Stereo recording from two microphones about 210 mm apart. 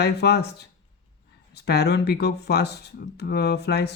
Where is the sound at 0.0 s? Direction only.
50° left (ahead or behind).